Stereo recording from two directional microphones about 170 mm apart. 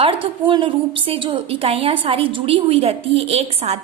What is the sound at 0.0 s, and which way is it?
A woman's voice, 30° right (ahead or behind).